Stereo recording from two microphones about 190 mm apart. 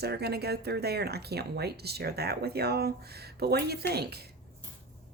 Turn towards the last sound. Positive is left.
turn(degrees=-55)  # may be behind; listen again after turning